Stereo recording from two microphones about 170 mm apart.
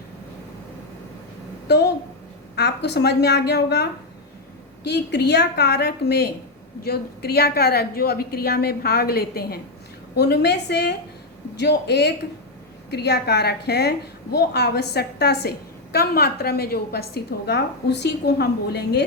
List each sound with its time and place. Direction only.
1.6 s a woman's voice: 75° left (ahead or behind)